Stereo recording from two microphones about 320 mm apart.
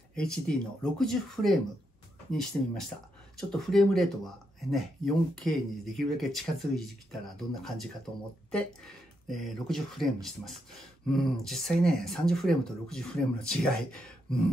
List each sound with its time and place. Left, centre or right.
0.1 s speech: centre